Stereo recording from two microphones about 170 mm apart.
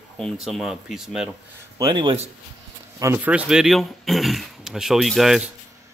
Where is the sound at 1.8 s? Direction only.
25° right (ahead or behind).